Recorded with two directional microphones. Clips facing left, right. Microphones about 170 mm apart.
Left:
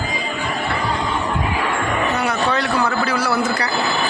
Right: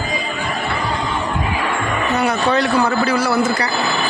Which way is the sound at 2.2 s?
20° right (ahead or behind).